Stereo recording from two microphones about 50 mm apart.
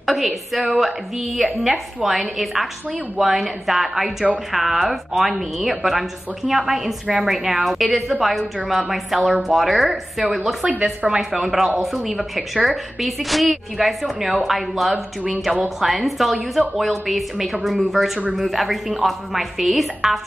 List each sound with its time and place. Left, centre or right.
0.0 s a woman's voice: centre
10.7 s speech: right
11.1 s a woman's voice: centre